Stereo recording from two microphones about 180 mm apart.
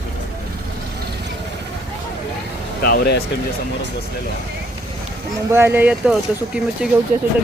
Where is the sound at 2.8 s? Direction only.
60° left (ahead or behind).